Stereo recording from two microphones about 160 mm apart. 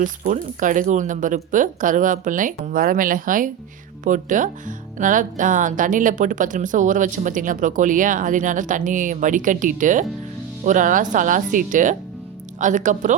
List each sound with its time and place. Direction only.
0.0 s speech: 55° right (ahead or behind)